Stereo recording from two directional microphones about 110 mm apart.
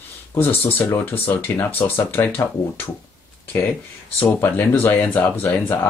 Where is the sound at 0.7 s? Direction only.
15° left (ahead or behind).